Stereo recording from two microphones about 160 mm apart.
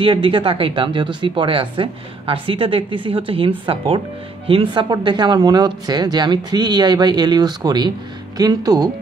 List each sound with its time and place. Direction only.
0.0 s speech: 35° right (ahead or behind)